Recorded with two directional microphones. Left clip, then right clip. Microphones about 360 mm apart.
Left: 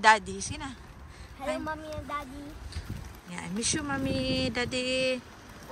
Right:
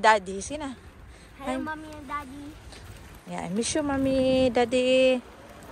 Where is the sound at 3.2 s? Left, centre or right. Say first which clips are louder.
Right 3 dB; centre.